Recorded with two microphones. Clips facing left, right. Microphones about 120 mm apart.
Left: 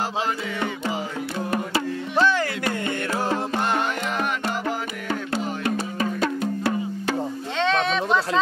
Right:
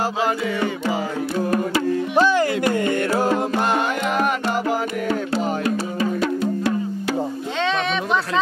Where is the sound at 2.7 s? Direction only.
45° right (ahead or behind).